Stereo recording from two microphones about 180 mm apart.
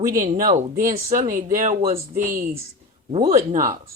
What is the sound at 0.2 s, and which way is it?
A man's voice, 50° right (ahead or behind).